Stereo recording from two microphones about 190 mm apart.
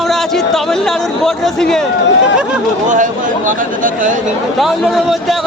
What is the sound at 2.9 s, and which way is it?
Speech, 45° right (ahead or behind).